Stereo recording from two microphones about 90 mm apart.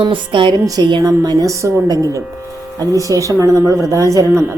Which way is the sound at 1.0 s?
45° right (ahead or behind).